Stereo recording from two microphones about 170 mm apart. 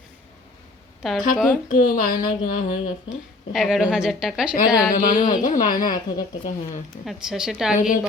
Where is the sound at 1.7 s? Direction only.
50° left (ahead or behind).